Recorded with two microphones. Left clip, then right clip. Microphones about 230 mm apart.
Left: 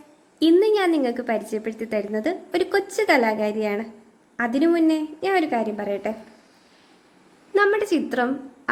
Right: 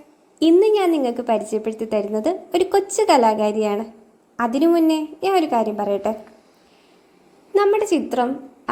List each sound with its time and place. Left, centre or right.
0.3 s a woman's voice: centre
7.5 s a woman's voice: centre